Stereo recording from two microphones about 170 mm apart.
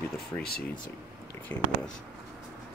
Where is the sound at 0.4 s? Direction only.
65° left (ahead or behind).